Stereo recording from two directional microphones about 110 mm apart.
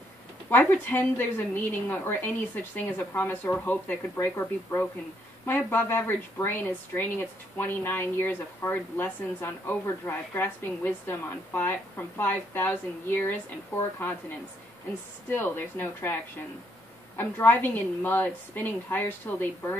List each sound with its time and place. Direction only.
0.5 s speech: 20° left (ahead or behind)
15.2 s speech: 20° left (ahead or behind)
17.2 s speech: 20° left (ahead or behind)